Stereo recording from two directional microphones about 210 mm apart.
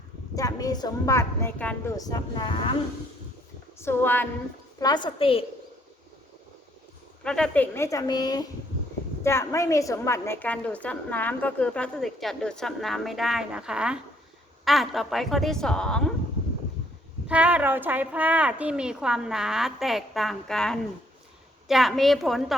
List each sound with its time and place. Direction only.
0.3 s a woman's voice: 15° left (ahead or behind)
3.8 s a woman's voice: 10° left (ahead or behind)
4.8 s a woman's voice: 20° left (ahead or behind)
7.3 s a woman's voice: 5° left (ahead or behind)
17.2 s a woman's voice: 5° right (ahead or behind)